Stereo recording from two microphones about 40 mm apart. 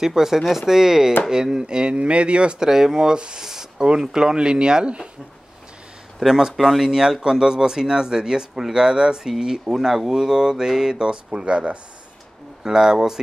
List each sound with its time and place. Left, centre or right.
0.0 s speech: centre; by 2.5 s right
2.6 s speech: centre
6.1 s speech: centre
6.5 s speech: centre
6.8 s speech: centre
12.6 s speech: centre